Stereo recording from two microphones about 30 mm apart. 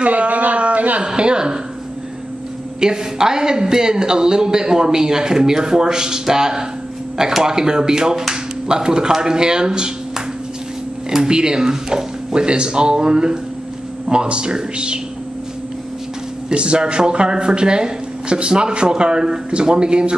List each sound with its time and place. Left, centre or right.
0.0 s a sound: right
1.0 s speech: right
2.8 s speech: right
16.4 s speech: right